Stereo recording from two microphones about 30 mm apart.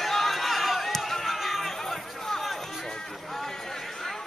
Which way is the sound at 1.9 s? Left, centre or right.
Centre.